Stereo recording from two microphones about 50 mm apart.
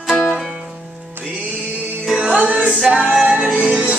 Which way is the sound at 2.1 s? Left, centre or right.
Right.